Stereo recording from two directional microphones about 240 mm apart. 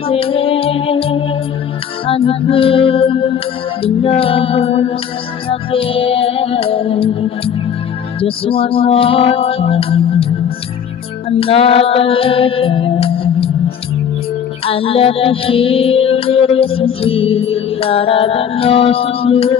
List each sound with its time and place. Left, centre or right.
0.1 s music: left
11.2 s music: left
14.7 s music: left